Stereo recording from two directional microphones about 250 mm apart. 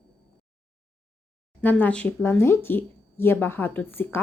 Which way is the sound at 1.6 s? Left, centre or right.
Centre.